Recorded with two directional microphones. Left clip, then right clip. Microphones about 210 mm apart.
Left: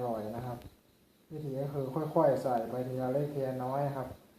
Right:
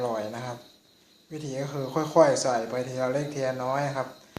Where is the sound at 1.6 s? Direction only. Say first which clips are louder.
Right 6 dB; 35° right (ahead or behind).